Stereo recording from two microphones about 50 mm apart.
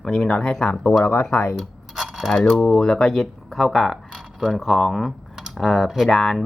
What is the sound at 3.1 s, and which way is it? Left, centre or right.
Speech, centre.